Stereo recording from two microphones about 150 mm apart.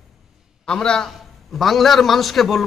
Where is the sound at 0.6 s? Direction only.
5° left (ahead or behind).